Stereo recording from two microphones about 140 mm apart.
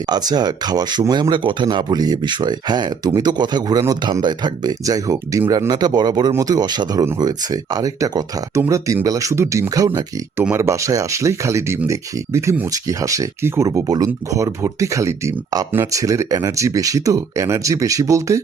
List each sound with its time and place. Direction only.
0.1 s speech: 30° right (ahead or behind)